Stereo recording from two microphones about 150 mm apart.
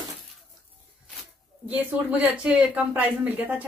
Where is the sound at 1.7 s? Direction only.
10° right (ahead or behind).